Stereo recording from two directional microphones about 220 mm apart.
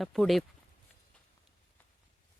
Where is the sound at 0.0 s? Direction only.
Centre (ahead or behind).